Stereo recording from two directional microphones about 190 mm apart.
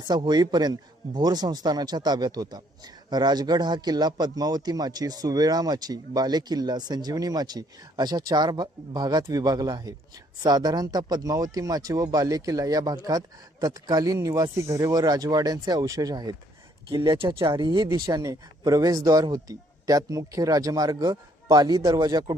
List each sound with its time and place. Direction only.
0.1 s speech: 20° right (ahead or behind)